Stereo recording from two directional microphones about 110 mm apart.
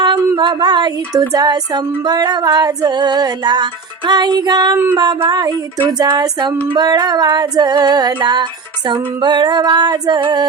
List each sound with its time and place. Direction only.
0.3 s female singing: 40° right (ahead or behind)